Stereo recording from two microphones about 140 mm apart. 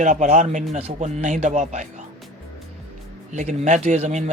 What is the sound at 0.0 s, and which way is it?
Speech, 60° right (ahead or behind).